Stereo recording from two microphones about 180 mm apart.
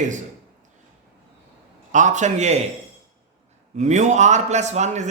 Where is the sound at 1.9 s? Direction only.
45° right (ahead or behind).